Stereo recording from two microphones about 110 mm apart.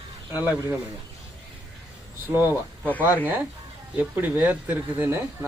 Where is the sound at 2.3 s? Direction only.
20° right (ahead or behind).